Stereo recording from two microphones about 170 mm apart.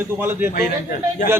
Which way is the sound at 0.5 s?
50° left (ahead or behind).